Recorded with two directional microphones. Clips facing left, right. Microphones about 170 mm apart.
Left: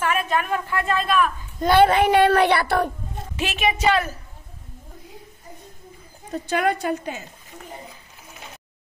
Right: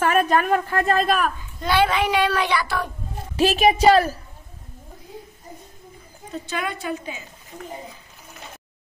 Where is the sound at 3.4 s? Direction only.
35° right (ahead or behind).